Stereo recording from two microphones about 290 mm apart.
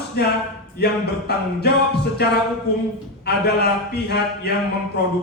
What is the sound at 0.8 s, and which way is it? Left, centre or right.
Speech, left.